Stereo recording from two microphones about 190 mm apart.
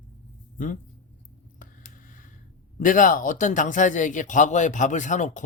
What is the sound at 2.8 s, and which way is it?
Speech, 45° left (ahead or behind).